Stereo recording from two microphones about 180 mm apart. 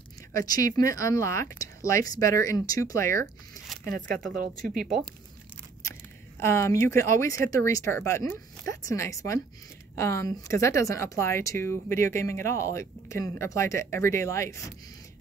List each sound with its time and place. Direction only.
0.3 s a woman's voice: 20° left (ahead or behind)
4.3 s speech: 50° right (ahead or behind)
6.4 s a woman's voice: 15° left (ahead or behind)